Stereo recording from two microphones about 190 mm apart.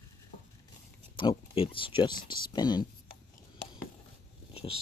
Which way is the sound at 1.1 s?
25° left (ahead or behind).